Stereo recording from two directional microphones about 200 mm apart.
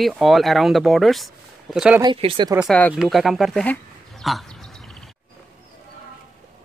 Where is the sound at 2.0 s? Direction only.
25° right (ahead or behind).